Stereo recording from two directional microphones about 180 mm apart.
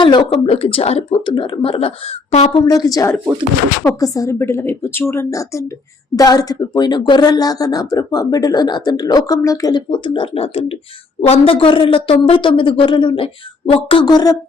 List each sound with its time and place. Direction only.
0.0 s speech: 25° left (ahead or behind)
2.5 s a woman's voice: 25° left (ahead or behind)